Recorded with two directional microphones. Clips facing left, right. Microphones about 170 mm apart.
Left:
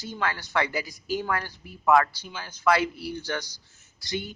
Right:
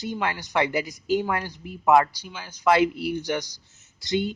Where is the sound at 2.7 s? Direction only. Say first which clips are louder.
Right 4 dB; 20° right (ahead or behind).